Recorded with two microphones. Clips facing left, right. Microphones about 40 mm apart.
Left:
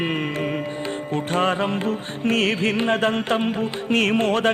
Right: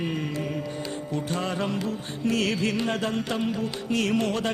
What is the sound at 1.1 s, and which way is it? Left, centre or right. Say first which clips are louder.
Music: left 8 dB; left.